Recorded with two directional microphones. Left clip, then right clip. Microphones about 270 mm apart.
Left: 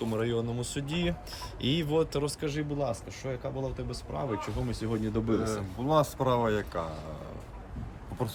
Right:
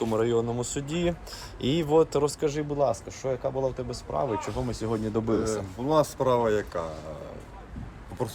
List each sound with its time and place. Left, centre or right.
0.1 s speech: centre
5.8 s speech: centre
8.2 s speech: centre